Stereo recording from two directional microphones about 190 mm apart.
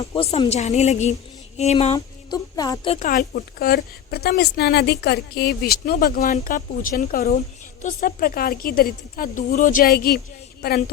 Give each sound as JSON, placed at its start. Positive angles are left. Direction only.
{"t": 0.2, "sound": "a woman's voice", "side_deg": 30}
{"t": 2.3, "sound": "speech", "side_deg": 20}
{"t": 2.9, "sound": "a woman's voice", "side_deg": 45}